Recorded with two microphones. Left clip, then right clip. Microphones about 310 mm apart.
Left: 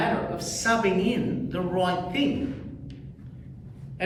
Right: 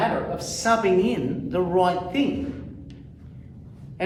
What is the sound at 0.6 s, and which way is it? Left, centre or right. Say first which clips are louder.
A woman's voice: right 4 dB; centre.